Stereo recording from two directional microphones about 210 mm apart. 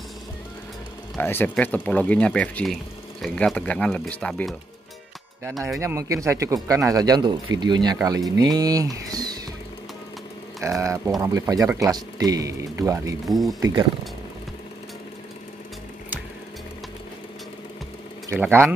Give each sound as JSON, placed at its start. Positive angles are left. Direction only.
{"t": 1.1, "sound": "speech", "side_deg": 10}
{"t": 5.8, "sound": "speech", "side_deg": -15}
{"t": 10.6, "sound": "speech", "side_deg": -15}
{"t": 13.3, "sound": "speech", "side_deg": 0}
{"t": 13.6, "sound": "speech", "side_deg": -15}
{"t": 18.3, "sound": "speech", "side_deg": -10}